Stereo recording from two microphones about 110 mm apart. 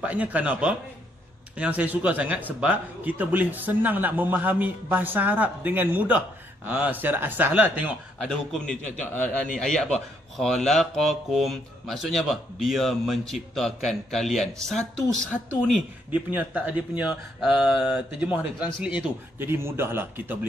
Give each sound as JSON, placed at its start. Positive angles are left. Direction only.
{"t": 0.0, "sound": "a man's voice", "side_deg": -15}
{"t": 8.3, "sound": "a man's voice", "side_deg": 5}
{"t": 16.1, "sound": "a man's voice", "side_deg": -15}